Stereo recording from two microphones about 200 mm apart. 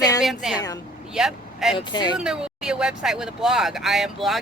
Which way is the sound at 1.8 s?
20° left (ahead or behind).